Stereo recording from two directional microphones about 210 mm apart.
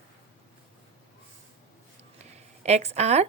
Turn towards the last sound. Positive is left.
turn(degrees=-30)  # may be behind; listen again after turning